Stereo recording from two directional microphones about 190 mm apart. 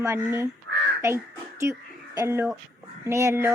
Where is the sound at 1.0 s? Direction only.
15° right (ahead or behind).